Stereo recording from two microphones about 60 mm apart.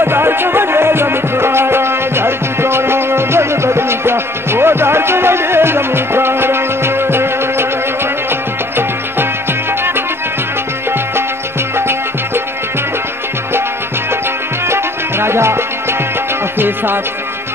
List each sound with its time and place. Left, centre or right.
0.0 s music: right
14.7 s music: right